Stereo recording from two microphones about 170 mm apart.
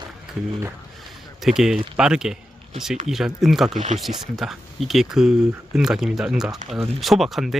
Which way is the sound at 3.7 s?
40° right (ahead or behind).